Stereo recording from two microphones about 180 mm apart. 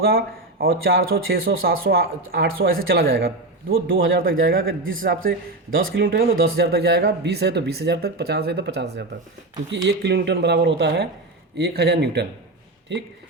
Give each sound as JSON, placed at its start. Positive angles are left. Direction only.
{"t": 0.0, "sound": "speech", "side_deg": -55}
{"t": 4.6, "sound": "a man's voice", "side_deg": -90}
{"t": 5.7, "sound": "speech", "side_deg": -55}